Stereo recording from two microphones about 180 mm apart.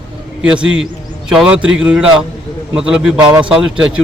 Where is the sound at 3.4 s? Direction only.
5° right (ahead or behind).